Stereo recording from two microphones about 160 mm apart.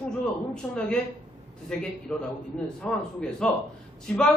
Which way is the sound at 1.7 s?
5° left (ahead or behind).